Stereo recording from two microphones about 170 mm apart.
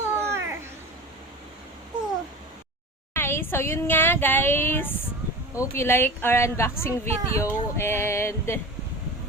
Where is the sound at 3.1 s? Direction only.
15° left (ahead or behind).